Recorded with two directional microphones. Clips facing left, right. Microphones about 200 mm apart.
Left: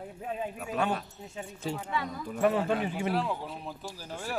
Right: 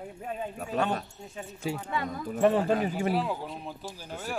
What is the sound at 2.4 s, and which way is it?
Speech, 30° right (ahead or behind).